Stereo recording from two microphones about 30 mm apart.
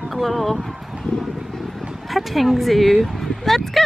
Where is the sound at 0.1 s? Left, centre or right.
Centre.